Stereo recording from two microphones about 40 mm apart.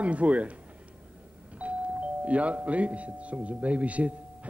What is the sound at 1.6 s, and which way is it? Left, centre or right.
Speech, right.